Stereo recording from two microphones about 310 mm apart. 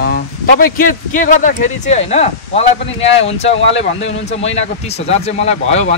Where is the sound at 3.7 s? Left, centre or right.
Left.